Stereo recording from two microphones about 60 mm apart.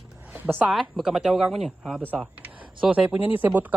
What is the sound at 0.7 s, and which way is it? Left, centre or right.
Speech, centre.